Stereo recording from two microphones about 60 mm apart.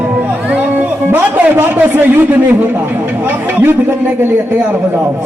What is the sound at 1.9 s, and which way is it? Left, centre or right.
Speech, right.